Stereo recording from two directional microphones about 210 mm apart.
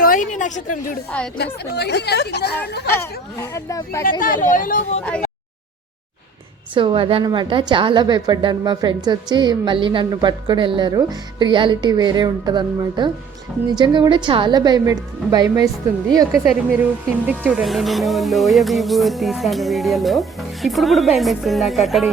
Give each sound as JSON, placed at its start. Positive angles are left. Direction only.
{"t": 0.0, "sound": "a woman's voice", "side_deg": 40}
{"t": 1.7, "sound": "a woman's voice", "side_deg": 50}
{"t": 2.9, "sound": "speech", "side_deg": 15}
{"t": 4.2, "sound": "speech", "side_deg": 40}
{"t": 6.7, "sound": "a woman's voice", "side_deg": -25}
{"t": 17.2, "sound": "speech", "side_deg": -5}